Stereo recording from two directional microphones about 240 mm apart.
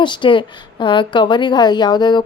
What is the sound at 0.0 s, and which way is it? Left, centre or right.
A woman's voice, centre.